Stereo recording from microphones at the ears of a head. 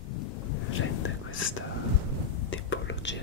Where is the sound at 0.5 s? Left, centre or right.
Left.